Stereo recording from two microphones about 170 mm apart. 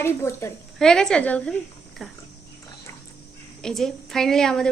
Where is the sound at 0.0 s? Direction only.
15° left (ahead or behind).